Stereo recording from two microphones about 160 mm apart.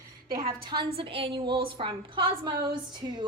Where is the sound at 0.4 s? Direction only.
30° right (ahead or behind).